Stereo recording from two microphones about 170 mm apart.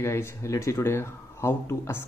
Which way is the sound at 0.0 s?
15° left (ahead or behind).